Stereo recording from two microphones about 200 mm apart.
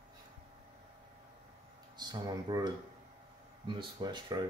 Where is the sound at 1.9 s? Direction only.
20° right (ahead or behind).